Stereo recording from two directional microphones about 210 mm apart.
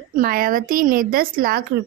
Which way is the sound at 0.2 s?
40° right (ahead or behind).